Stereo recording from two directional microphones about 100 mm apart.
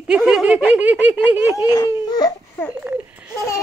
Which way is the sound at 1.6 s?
45° left (ahead or behind).